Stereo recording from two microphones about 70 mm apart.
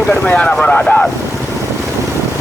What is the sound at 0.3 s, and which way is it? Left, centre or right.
Speech, centre.